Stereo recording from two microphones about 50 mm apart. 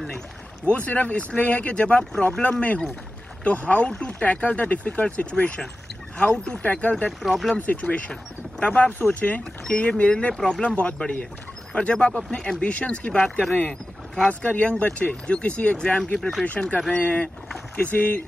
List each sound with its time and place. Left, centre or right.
0.7 s speech: left
7.1 s speech: centre
7.5 s speech: left
10.3 s speech: centre
10.6 s speech: left
13.7 s boat: centre
14.6 s speech: left
16.2 s speech: centre
16.4 s speech: left